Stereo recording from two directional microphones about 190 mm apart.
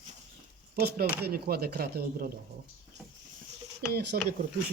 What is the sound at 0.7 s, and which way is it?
Speech, 55° right (ahead or behind).